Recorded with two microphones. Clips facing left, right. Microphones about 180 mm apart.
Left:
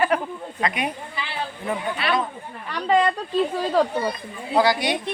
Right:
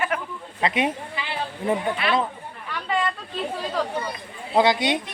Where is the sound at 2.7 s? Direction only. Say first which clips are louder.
Left 7 dB; 40° left (ahead or behind).